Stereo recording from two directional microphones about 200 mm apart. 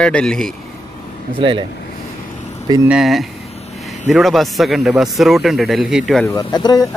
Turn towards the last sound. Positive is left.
turn(degrees=20)  # may be behind; listen again after turning